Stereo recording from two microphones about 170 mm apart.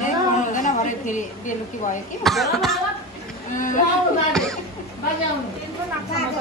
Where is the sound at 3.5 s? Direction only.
50° left (ahead or behind).